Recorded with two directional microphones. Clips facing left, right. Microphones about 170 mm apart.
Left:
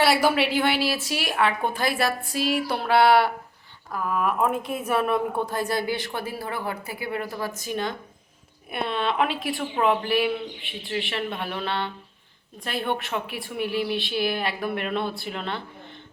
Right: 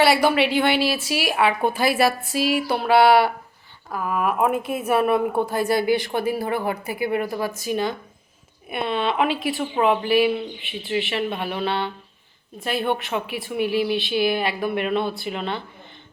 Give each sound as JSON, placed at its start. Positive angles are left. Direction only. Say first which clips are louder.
{"t": 0.0, "sound": "a woman's voice", "louder": "right 3 dB", "side_deg": 0}